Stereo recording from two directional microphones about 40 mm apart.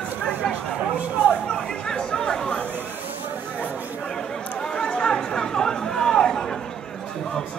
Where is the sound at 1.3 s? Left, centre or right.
Centre.